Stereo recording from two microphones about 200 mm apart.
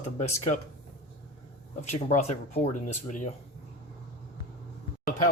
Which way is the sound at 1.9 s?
35° left (ahead or behind).